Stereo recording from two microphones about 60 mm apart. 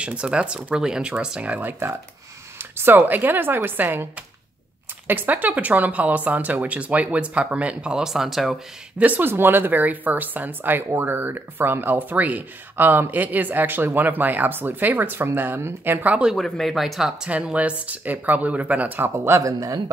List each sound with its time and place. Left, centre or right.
0.0 s speech: centre
0.7 s speech: centre
1.6 s speech: right; by 8.5 s centre
8.9 s speech: right
16.3 s speech: centre
17.3 s speech: right
19.0 s speech: right
19.4 s a man's voice: right